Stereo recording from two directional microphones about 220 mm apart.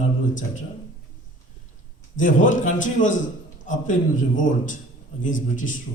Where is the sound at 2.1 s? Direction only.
35° left (ahead or behind).